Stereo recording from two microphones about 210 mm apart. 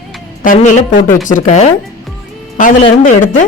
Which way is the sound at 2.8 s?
35° left (ahead or behind).